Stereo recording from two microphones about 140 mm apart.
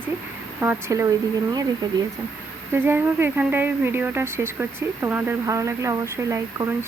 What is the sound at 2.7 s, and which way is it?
Speech, 15° right (ahead or behind).